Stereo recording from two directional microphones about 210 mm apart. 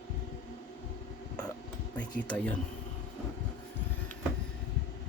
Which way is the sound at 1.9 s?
5° left (ahead or behind).